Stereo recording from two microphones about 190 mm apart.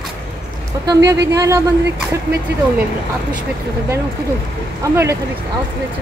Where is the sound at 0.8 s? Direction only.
15° right (ahead or behind).